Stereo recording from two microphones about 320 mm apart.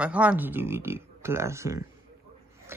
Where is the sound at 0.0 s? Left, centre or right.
Centre.